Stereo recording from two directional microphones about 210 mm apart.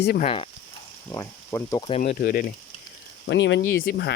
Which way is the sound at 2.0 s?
40° left (ahead or behind).